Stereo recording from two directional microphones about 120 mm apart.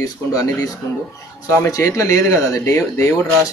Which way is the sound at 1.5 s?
25° left (ahead or behind).